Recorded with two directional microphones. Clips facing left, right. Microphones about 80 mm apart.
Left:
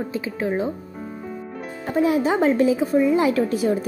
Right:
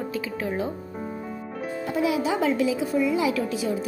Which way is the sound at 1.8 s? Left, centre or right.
Left.